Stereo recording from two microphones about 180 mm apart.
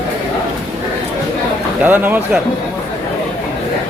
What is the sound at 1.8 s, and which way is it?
Speech, 10° right (ahead or behind).